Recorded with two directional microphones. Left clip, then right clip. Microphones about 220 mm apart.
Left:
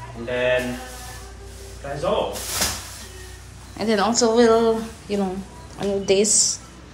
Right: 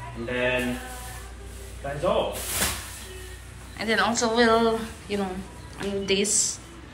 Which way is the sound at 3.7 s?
20° left (ahead or behind).